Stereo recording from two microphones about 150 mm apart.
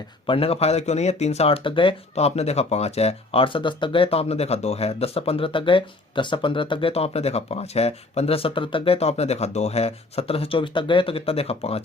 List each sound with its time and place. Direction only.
0.3 s speech: 40° left (ahead or behind)